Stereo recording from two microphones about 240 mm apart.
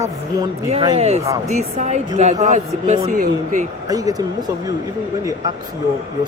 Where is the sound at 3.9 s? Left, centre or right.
Centre.